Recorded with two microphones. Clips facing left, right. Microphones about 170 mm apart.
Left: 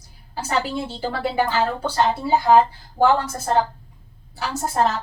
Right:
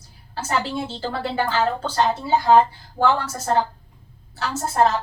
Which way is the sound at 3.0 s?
15° left (ahead or behind).